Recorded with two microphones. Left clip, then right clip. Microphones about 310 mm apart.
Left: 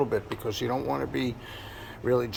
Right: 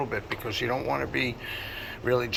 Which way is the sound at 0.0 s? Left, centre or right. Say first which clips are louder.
Left 3 dB; left.